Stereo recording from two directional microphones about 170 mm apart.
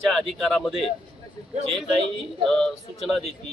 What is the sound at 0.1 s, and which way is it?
Speech, centre (ahead or behind).